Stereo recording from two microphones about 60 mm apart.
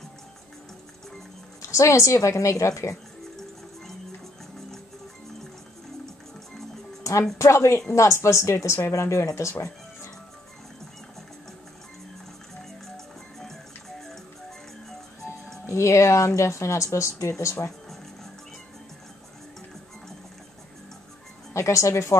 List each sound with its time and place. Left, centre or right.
1.6 s speech: left
7.0 s music: left
7.3 s speech: left
12.8 s music: centre
15.6 s speech: left
21.5 s speech: left